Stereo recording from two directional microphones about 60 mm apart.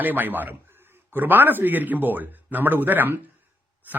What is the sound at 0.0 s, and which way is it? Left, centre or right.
Speech, right.